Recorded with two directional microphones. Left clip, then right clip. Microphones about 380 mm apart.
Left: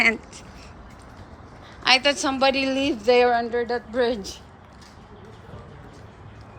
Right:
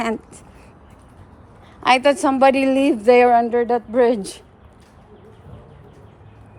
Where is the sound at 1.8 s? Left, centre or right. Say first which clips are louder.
Right 4 dB; centre.